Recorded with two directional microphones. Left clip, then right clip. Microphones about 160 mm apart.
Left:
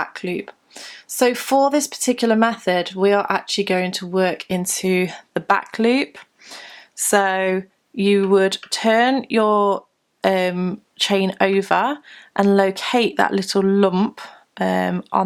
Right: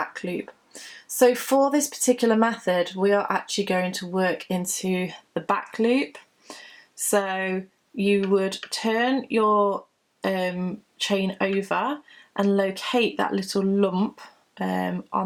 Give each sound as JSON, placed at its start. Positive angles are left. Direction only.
{"t": 0.0, "sound": "a sound", "side_deg": 30}
{"t": 1.1, "sound": "speech", "side_deg": 30}
{"t": 7.1, "sound": "speech", "side_deg": 40}